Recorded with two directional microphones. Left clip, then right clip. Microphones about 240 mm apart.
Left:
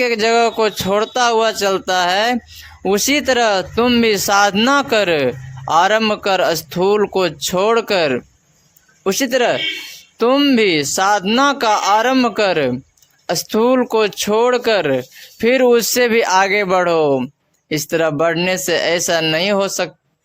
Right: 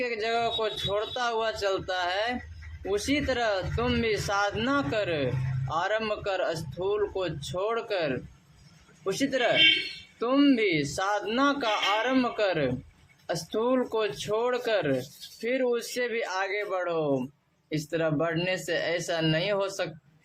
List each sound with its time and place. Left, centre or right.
0.0 s speech: left